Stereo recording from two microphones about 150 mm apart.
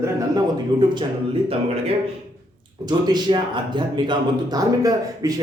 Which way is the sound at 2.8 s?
30° right (ahead or behind).